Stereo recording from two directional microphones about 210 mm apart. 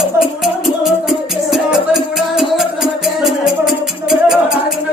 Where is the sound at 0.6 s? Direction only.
Centre (ahead or behind).